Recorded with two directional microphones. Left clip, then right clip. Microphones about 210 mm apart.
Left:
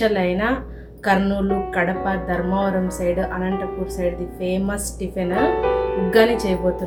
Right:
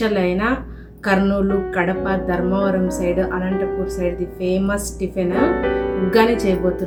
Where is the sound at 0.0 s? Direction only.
Centre (ahead or behind).